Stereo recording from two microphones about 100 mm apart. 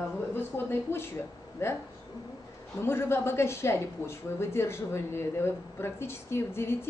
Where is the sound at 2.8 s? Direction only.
25° left (ahead or behind).